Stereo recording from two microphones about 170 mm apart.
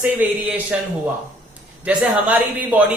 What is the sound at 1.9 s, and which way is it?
Speech, 10° right (ahead or behind).